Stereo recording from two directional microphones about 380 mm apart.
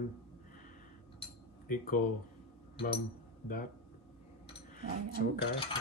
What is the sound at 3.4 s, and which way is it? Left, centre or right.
Speech, left.